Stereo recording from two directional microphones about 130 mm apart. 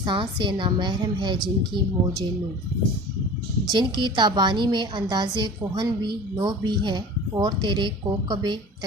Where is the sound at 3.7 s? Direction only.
35° right (ahead or behind).